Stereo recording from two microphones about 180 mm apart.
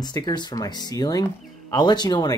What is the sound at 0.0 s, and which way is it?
Speech, 25° left (ahead or behind).